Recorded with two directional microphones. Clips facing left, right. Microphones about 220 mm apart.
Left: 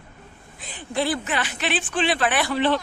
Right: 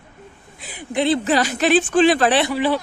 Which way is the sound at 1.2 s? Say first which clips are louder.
Right 9 dB; 40° right (ahead or behind).